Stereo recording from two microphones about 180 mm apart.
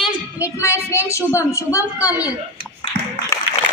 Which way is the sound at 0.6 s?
15° left (ahead or behind).